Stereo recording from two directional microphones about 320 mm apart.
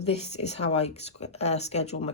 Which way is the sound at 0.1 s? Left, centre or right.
Centre.